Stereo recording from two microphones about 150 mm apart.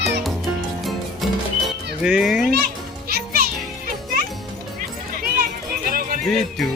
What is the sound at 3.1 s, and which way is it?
Music, 90° right.